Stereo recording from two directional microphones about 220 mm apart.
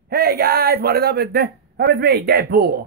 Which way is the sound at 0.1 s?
45° right (ahead or behind).